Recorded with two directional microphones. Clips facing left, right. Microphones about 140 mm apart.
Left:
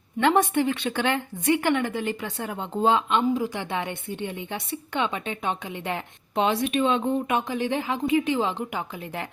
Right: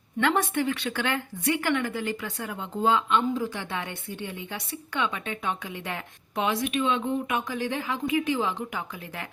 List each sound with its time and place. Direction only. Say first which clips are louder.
0.2 s a woman's voice: left 4 dB; 25° left (ahead or behind)